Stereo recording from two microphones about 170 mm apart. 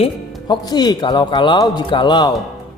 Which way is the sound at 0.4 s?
25° left (ahead or behind).